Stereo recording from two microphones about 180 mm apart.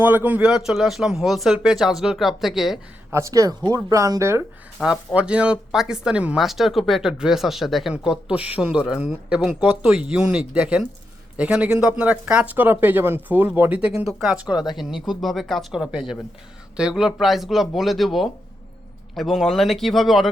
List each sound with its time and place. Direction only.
0.0 s speech: 10° right (ahead or behind)
3.1 s speech: 15° right (ahead or behind); by 20.3 s centre (ahead or behind)